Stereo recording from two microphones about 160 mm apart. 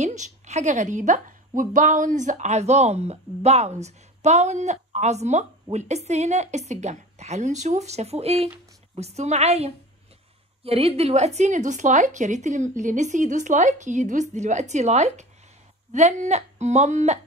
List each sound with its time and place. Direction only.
0.0 s a woman's voice: 50° right (ahead or behind)